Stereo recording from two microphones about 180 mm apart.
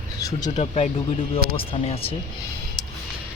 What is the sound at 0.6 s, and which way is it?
Speech, 35° left (ahead or behind).